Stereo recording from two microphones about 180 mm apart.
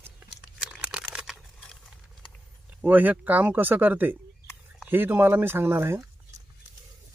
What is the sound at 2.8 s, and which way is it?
Speech, 10° right (ahead or behind).